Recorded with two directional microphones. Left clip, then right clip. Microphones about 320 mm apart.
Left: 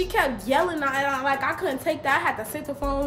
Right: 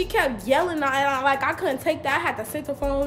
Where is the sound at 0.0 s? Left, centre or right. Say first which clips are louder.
Right 1 dB; centre.